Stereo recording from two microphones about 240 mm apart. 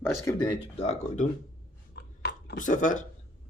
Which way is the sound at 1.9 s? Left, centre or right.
Left.